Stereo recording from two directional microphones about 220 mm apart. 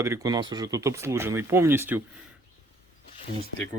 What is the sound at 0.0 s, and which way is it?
Speech, 15° right (ahead or behind).